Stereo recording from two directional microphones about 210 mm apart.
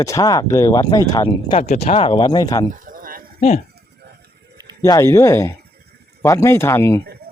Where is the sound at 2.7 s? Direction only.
40° right (ahead or behind).